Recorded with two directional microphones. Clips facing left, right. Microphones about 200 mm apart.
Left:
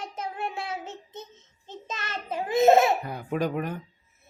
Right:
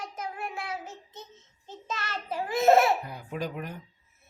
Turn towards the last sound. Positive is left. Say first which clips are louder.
# left 7 dB
turn(degrees=60)  # may be behind; listen again after turning